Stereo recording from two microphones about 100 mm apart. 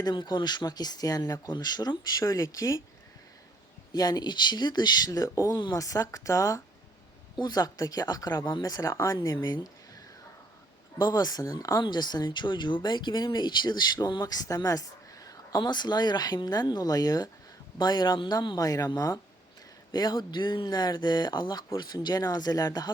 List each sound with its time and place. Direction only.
0.0 s speech: 50° left (ahead or behind); by 2.8 s 30° left (ahead or behind)
3.9 s speech: 40° left (ahead or behind)
7.3 s speech: 45° left (ahead or behind)
11.0 s a woman's voice: 40° left (ahead or behind)